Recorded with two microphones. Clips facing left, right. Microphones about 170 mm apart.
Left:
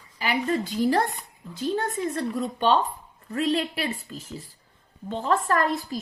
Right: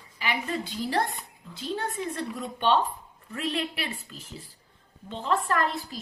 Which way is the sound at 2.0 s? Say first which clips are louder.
Left 6 dB; 40° left (ahead or behind).